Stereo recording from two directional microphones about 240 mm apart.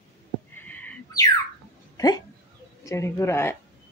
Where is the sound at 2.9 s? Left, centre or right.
Centre.